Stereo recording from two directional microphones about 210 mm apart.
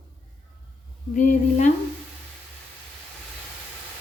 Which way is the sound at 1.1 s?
35° left (ahead or behind).